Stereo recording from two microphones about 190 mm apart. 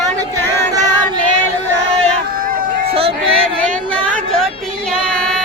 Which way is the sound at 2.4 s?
50° right (ahead or behind).